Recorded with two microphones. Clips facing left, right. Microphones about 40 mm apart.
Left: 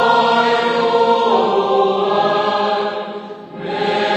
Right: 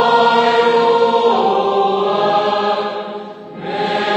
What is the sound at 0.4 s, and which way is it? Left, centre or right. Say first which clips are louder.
Choir: right 3 dB; centre.